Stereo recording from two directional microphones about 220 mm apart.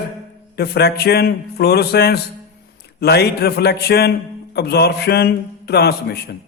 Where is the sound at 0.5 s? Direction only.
45° left (ahead or behind).